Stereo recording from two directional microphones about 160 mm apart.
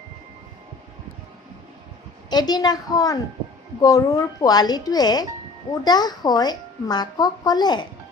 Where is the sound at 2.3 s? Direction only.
25° left (ahead or behind).